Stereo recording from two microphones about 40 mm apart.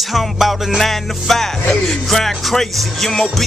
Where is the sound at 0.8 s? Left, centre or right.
Centre.